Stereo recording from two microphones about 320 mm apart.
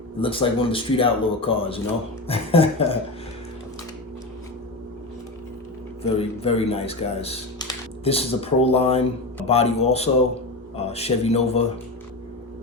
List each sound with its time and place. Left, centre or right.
0.2 s speech: centre
6.0 s speech: centre